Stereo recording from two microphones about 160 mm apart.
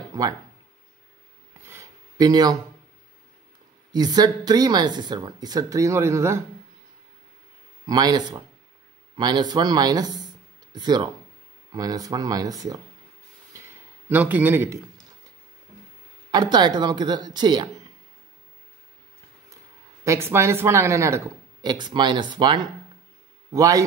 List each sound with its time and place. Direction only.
0.1 s speech: 25° right (ahead or behind)
1.7 s a sound: 20° right (ahead or behind)
3.9 s speech: 25° right (ahead or behind)
7.8 s speech: 25° right (ahead or behind)
14.0 s a man's voice: 10° right (ahead or behind)
16.3 s speech: 25° right (ahead or behind)
20.1 s speech: 15° right (ahead or behind)